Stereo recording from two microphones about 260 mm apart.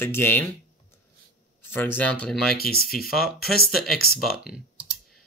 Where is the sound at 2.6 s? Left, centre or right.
Left.